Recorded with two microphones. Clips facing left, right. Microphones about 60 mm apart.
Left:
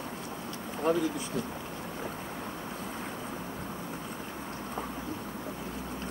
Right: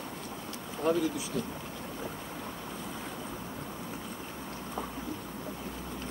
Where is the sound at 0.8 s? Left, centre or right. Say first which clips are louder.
Even; left.